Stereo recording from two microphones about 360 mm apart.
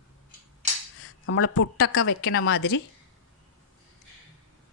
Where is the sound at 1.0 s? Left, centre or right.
Left.